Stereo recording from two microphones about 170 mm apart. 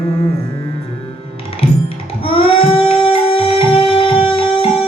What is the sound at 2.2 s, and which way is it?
Music, 35° left (ahead or behind).